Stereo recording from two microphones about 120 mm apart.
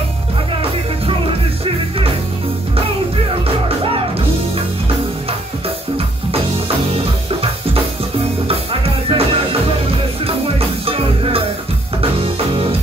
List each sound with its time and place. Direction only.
9.1 s music: 50° right (ahead or behind)
10.9 s music: 50° right (ahead or behind)